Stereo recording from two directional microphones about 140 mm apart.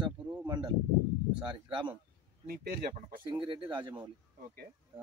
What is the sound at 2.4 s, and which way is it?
Speech, 90° right.